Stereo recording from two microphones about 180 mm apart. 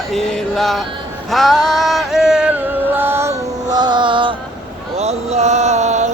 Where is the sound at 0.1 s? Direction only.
5° left (ahead or behind).